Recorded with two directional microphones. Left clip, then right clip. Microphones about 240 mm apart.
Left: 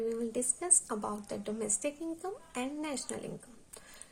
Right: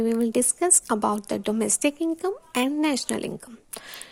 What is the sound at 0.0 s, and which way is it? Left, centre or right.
A woman's voice, right.